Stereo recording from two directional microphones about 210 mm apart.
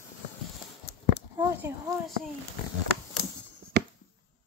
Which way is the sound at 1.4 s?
10° right (ahead or behind).